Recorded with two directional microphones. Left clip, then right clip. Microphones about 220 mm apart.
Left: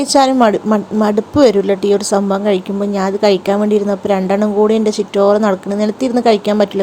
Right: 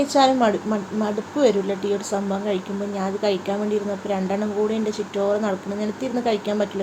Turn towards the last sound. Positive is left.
turn(degrees=40)  # may be behind; listen again after turning